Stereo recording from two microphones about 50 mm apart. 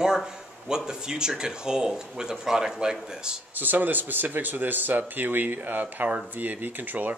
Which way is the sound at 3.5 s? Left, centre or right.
Right.